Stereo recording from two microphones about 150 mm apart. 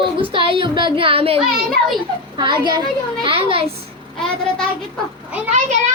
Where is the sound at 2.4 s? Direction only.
30° right (ahead or behind).